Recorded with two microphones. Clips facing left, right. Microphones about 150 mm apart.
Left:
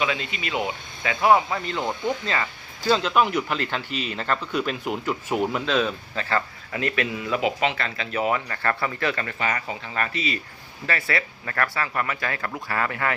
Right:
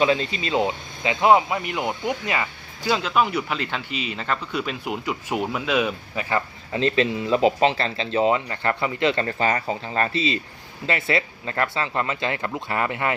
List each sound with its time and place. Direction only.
0.0 s speech: 35° right (ahead or behind)
9.2 s speech: 30° right (ahead or behind)